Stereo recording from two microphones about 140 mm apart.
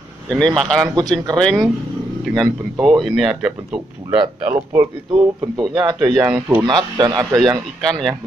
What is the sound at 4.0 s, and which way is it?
Speech, 35° right (ahead or behind).